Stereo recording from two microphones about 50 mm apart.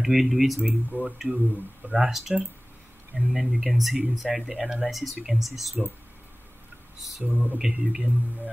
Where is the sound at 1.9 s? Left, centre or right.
Centre.